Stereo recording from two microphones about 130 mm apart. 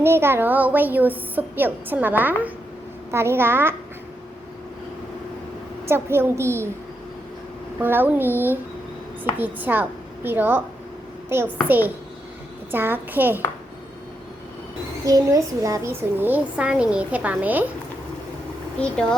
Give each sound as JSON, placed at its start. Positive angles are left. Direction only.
{"t": 0.0, "sound": "speech", "side_deg": -20}
{"t": 5.9, "sound": "a woman's voice", "side_deg": -20}
{"t": 7.8, "sound": "speech", "side_deg": -15}
{"t": 12.7, "sound": "speech", "side_deg": -15}
{"t": 15.0, "sound": "speech", "side_deg": -25}
{"t": 18.8, "sound": "speech", "side_deg": 5}